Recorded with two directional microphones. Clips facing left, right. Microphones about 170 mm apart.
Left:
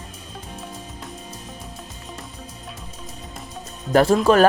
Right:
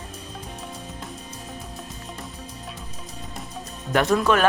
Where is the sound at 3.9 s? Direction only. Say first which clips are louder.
Left 5 dB; 30° left (ahead or behind).